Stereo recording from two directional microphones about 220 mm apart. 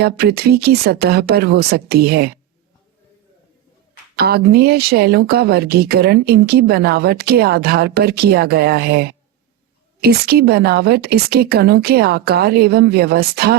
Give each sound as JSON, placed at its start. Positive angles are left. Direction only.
{"t": 0.0, "sound": "speech", "side_deg": -45}
{"t": 4.2, "sound": "speech", "side_deg": -45}